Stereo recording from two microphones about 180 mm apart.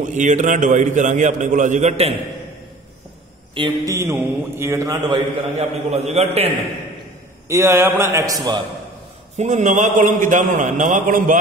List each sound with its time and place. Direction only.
0.1 s a man's voice: 45° right (ahead or behind)
3.5 s a man's voice: 20° right (ahead or behind)
5.6 s a man's voice: 35° right (ahead or behind)
7.4 s a man's voice: 15° right (ahead or behind)
9.4 s a man's voice: 40° right (ahead or behind)